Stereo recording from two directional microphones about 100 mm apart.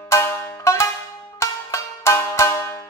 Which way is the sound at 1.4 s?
30° left (ahead or behind).